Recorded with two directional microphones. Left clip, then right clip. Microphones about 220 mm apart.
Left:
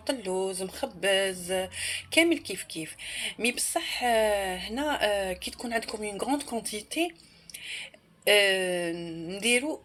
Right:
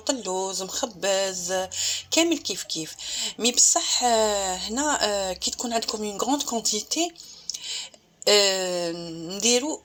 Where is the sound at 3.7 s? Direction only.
20° right (ahead or behind).